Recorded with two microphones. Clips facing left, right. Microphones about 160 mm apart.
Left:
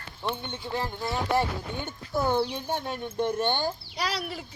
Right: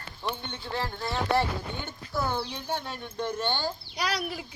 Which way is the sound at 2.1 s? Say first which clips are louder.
Left 5 dB; 20° left (ahead or behind).